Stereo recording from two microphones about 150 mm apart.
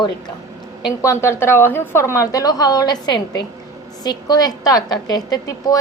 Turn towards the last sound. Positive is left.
turn(degrees=25)  # may be behind; listen again after turning